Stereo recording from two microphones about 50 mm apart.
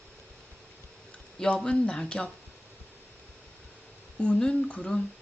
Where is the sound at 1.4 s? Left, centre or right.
Centre.